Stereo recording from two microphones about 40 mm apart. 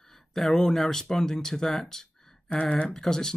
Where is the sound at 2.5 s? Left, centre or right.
Left.